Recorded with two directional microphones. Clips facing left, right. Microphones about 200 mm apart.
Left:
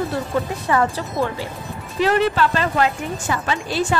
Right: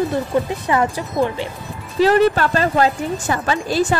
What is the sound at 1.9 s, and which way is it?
Speech, 40° right (ahead or behind).